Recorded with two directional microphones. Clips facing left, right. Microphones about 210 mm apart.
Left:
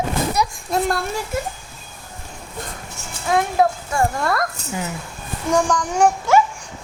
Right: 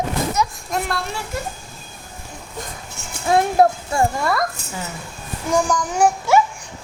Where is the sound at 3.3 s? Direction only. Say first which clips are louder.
Right 2 dB; 30° right (ahead or behind).